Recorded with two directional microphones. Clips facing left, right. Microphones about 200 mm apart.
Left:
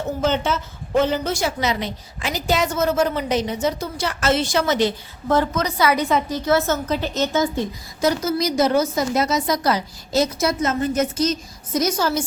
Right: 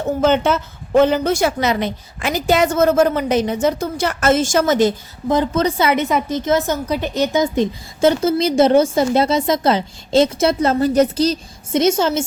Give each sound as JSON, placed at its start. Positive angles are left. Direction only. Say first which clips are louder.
{"t": 0.2, "sound": "a woman's voice", "louder": "right 6 dB", "side_deg": -55}
{"t": 5.5, "sound": "a woman's voice", "louder": "right 3 dB", "side_deg": -25}